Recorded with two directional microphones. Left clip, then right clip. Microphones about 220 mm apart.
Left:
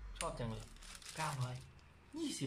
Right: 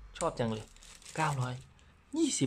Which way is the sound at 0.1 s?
45° right (ahead or behind).